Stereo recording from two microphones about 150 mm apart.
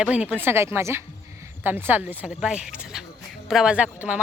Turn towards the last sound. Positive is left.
turn(degrees=-10)  # may be behind; listen again after turning